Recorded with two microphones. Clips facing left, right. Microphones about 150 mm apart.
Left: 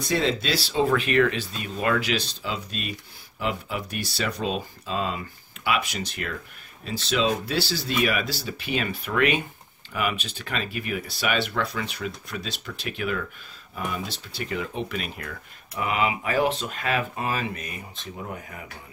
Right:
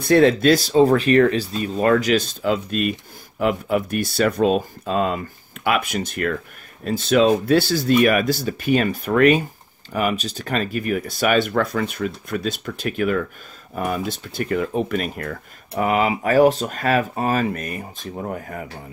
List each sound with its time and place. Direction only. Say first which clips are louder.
0.0 s speech: right 11 dB; 55° right (ahead or behind)